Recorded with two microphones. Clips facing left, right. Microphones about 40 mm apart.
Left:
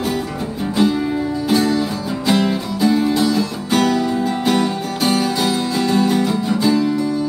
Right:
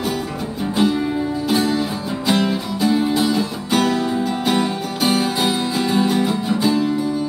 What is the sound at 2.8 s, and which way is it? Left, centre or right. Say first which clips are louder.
Music: left 2 dB; centre.